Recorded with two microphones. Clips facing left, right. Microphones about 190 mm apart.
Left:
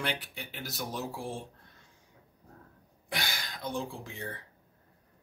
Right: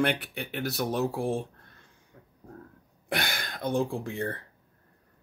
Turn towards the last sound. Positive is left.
turn(degrees=-55)  # may be behind; listen again after turning